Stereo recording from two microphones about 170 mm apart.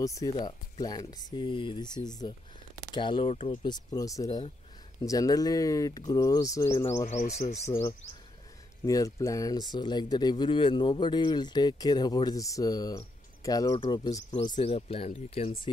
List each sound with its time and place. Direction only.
0.0 s speech: 20° left (ahead or behind)
7.1 s speech: 40° left (ahead or behind)
8.8 s speech: 20° left (ahead or behind); by 15.5 s 35° left (ahead or behind)